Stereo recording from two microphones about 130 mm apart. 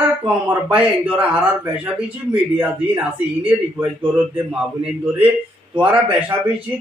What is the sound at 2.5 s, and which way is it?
Speech, 15° right (ahead or behind).